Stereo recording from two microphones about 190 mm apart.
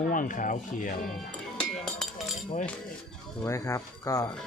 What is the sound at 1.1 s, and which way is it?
Music, 5° left (ahead or behind).